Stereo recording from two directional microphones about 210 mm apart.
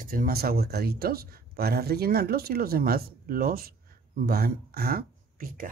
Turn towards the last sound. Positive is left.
turn(degrees=-40)  # may be behind; listen again after turning